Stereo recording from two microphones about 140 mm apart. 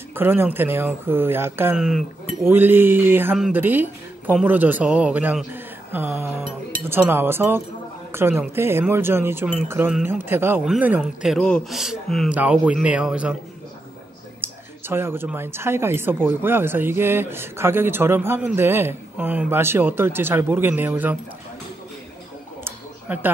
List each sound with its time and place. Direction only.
0.1 s speech: 15° right (ahead or behind)
1.8 s speech: 5° right (ahead or behind)
2.4 s speech: 15° right (ahead or behind)
11.0 s speech: 5° left (ahead or behind)
14.4 s speech: 15° right (ahead or behind)
22.6 s a sound: 15° right (ahead or behind)